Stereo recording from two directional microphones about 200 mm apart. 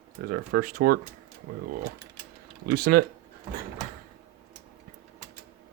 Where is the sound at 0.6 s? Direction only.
45° right (ahead or behind).